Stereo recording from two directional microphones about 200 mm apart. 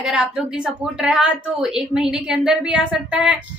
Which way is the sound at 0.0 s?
5° right (ahead or behind).